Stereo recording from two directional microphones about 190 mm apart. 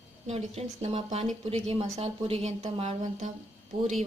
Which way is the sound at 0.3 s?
35° right (ahead or behind).